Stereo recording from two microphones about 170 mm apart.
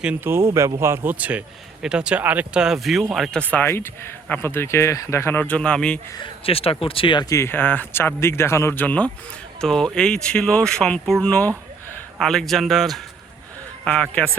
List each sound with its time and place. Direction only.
0.0 s a man's voice: 10° right (ahead or behind); by 6.0 s 5° left (ahead or behind)
6.1 s a man's voice: 35° left (ahead or behind); by 14.3 s 5° left (ahead or behind)